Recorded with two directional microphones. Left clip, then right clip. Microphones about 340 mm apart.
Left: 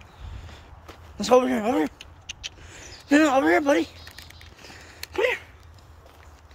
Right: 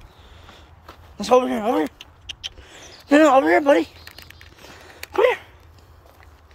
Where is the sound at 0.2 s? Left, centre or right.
Centre.